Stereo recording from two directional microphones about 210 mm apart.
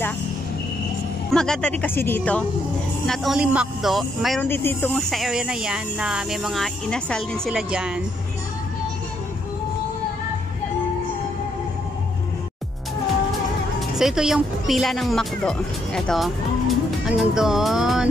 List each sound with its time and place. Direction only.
1.3 s speech: 5° left (ahead or behind)
3.1 s speech: 5° right (ahead or behind)
4.5 s speech: 10° left (ahead or behind)
4.9 s speech: centre (ahead or behind)
13.7 s speech: centre (ahead or behind)